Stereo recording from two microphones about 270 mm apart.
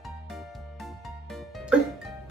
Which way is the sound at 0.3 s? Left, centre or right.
Centre.